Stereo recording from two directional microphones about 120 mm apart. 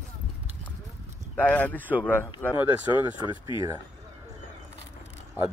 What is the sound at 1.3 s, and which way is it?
Speech, 10° left (ahead or behind).